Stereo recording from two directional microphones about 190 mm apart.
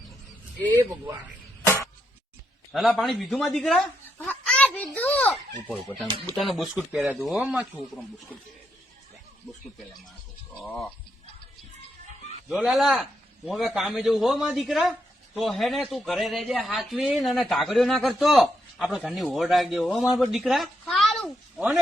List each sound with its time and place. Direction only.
1.6 s a sound: 15° left (ahead or behind)
2.7 s a man's voice: centre (ahead or behind)
4.2 s a sound: 5° left (ahead or behind)
5.6 s a man's voice: centre (ahead or behind)
10.6 s a man's voice: 5° left (ahead or behind)
12.5 s a man's voice: centre (ahead or behind)